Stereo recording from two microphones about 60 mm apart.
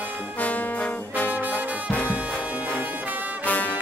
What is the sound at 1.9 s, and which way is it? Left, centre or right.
Brass instrument, left.